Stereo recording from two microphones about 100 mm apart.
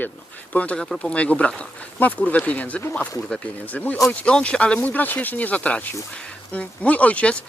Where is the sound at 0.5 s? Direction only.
15° left (ahead or behind).